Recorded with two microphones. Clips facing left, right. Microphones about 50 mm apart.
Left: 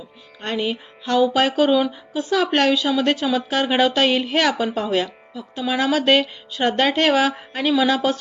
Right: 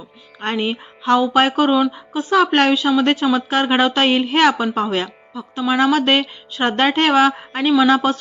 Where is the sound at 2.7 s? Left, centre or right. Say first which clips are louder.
Right 3 dB; centre.